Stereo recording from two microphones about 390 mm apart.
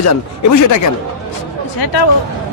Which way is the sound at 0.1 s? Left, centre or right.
Left.